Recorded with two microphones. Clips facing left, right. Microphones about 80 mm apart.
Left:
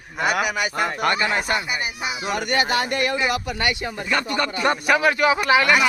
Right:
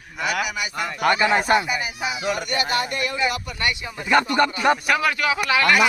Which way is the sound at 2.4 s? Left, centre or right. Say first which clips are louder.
Left 2 dB; left.